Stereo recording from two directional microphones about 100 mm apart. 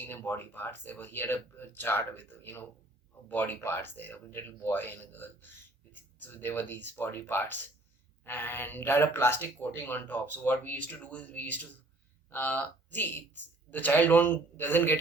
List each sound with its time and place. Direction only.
0.1 s speech: 20° left (ahead or behind)